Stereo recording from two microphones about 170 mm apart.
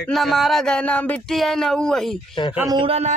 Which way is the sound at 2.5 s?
20° right (ahead or behind).